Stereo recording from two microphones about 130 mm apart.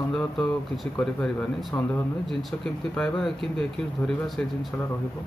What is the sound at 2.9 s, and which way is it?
Speech, 5° left (ahead or behind).